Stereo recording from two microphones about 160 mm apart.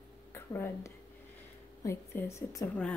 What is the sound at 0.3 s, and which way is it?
A woman's voice, 15° left (ahead or behind).